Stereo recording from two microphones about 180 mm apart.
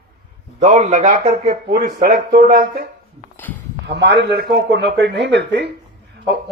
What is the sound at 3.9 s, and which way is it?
Speech, 70° right (ahead or behind).